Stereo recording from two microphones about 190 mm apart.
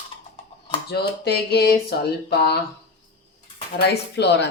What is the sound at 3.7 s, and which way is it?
Speech, 60° left (ahead or behind).